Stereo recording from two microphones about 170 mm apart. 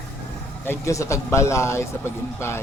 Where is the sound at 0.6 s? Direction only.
15° left (ahead or behind).